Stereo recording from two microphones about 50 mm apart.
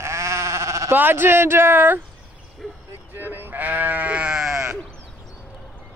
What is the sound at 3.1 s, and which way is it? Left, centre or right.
Sheep, right.